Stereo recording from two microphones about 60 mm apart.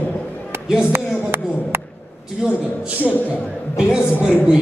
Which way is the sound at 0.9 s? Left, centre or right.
Right.